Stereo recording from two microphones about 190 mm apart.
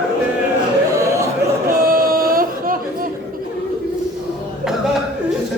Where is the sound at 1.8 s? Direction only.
50° right (ahead or behind).